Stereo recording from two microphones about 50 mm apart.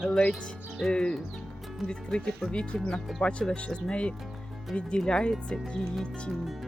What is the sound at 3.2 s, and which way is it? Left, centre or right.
Speech, left.